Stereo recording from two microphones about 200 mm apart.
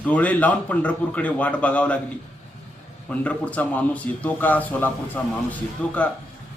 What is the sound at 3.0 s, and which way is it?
A man's voice, 5° left (ahead or behind).